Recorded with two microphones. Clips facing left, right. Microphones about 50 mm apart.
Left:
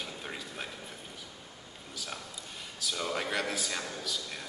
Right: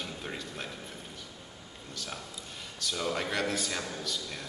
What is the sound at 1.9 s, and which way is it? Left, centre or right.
A man's voice, centre.